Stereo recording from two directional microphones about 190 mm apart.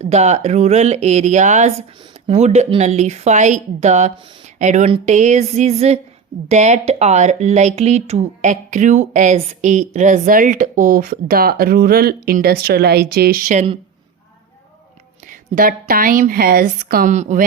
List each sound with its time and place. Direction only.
0.0 s speech: 35° right (ahead or behind)
15.3 s speech: 50° right (ahead or behind)